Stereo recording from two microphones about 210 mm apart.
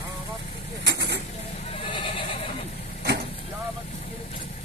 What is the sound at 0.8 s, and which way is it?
Vehicle, 55° right (ahead or behind).